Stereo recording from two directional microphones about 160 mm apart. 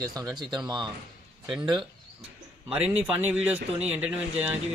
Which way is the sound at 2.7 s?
10° right (ahead or behind).